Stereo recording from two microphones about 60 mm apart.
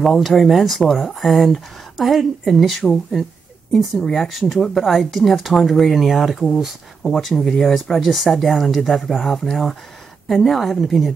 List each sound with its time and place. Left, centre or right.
0.0 s speech: centre
2.8 s speech: centre